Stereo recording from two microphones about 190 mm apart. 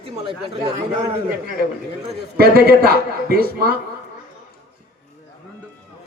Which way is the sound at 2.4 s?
55° right (ahead or behind).